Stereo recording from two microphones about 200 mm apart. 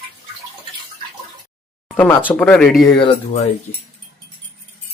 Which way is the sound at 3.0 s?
25° left (ahead or behind).